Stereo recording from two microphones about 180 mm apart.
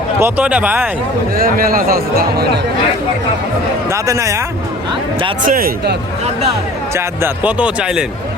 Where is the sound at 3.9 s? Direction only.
15° right (ahead or behind).